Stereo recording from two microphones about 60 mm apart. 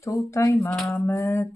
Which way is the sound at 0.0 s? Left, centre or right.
Left.